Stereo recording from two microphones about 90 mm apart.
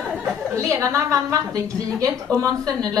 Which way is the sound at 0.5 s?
35° right (ahead or behind).